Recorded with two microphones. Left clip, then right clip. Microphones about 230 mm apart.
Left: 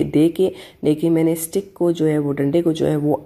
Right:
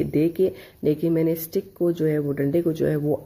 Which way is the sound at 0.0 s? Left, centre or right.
Centre.